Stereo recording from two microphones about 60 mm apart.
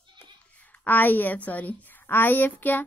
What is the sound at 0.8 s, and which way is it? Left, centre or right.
A woman's voice, left.